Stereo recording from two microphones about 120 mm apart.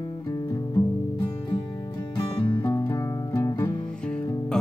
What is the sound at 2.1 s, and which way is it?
Music, 35° left (ahead or behind).